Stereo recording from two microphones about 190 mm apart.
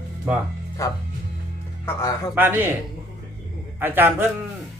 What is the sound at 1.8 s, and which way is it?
Speech, 15° left (ahead or behind).